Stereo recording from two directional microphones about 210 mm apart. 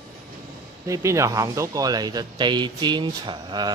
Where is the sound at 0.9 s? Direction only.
15° right (ahead or behind).